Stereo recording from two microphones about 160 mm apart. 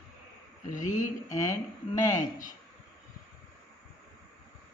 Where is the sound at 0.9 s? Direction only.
50° left (ahead or behind).